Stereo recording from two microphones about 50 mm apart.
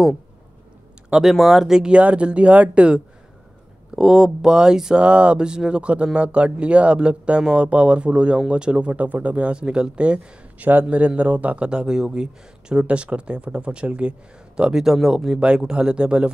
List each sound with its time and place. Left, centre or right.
1.3 s speech: centre
2.0 s speech: right
3.9 s speech: centre
5.0 s speech: right
10.7 s speech: right
14.6 s speech: centre
15.4 s speech: centre